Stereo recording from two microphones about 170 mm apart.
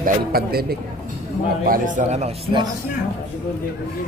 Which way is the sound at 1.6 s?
55° right (ahead or behind).